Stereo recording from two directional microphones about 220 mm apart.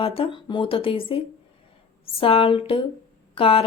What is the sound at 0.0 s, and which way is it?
Speech, 25° left (ahead or behind).